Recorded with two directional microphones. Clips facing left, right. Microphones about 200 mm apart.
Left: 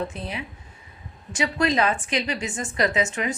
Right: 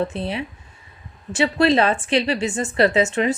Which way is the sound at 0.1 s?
30° right (ahead or behind).